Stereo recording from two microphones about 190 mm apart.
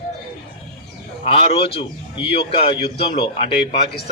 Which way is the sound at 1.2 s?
30° left (ahead or behind).